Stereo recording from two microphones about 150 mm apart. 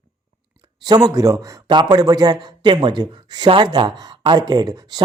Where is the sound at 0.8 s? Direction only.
25° right (ahead or behind).